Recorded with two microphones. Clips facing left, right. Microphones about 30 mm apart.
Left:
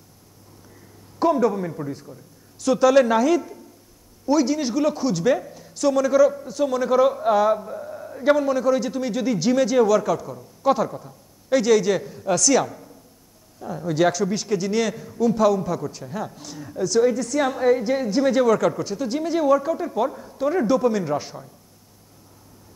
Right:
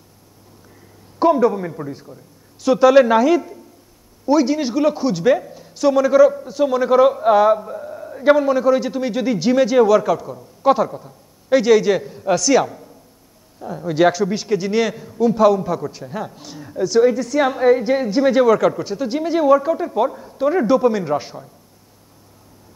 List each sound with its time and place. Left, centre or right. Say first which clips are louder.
1.2 s a man's voice: right 4 dB; centre
11.4 s a man's voice: right 4 dB; centre